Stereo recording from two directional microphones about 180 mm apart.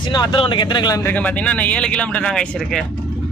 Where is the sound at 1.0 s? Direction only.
10° left (ahead or behind).